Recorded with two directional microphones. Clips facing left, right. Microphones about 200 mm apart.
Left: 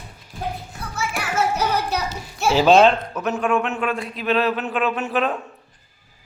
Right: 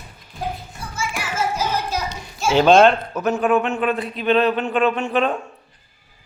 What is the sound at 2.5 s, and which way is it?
A man's voice, 5° left (ahead or behind).